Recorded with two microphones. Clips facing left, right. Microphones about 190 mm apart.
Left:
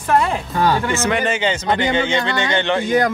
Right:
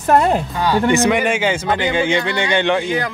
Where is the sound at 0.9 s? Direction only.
15° right (ahead or behind).